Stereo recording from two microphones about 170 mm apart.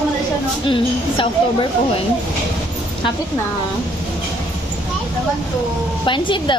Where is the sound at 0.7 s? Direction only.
30° left (ahead or behind).